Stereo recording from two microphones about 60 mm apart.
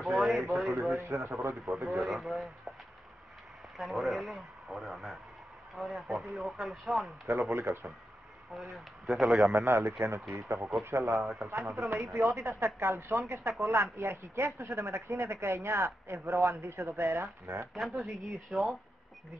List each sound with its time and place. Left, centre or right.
0.0 s a sound: centre
0.7 s speech: right
1.9 s speech: centre
3.7 s speech: centre
7.2 s speech: right
8.7 s speech: centre
9.3 s speech: right
17.7 s speech: centre
18.0 s speech: right
18.5 s speech: centre